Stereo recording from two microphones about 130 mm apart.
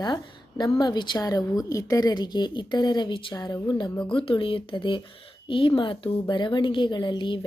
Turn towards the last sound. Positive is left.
turn(degrees=40)  # may be behind; listen again after turning